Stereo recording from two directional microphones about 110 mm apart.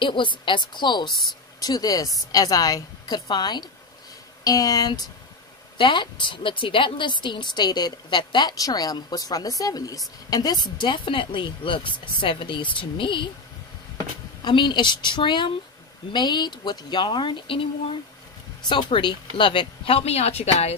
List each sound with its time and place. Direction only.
0.0 s a woman's voice: 45° left (ahead or behind)
5.8 s a woman's voice: 45° left (ahead or behind)
10.8 s speech: 50° left (ahead or behind)
14.4 s speech: 45° left (ahead or behind); by 20.7 s 75° left (ahead or behind)